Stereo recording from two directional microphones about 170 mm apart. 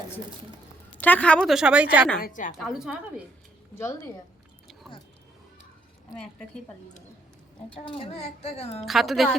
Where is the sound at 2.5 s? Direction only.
Centre (ahead or behind).